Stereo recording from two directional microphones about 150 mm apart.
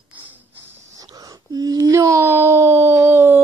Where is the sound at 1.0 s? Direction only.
25° right (ahead or behind).